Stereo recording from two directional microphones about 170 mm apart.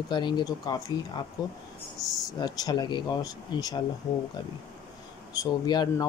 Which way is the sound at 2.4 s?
25° left (ahead or behind).